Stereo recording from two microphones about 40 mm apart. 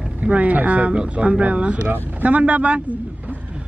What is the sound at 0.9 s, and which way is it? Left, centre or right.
A man's voice, right.